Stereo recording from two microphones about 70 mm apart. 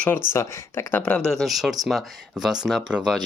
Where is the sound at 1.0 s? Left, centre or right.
Centre.